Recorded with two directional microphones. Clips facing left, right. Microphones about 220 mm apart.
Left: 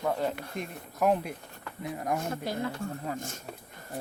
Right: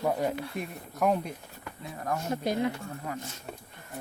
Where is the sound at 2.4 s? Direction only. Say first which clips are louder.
Right 8 dB; 20° right (ahead or behind).